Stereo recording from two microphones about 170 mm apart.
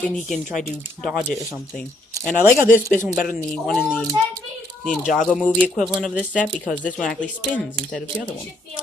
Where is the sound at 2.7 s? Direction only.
50° left (ahead or behind).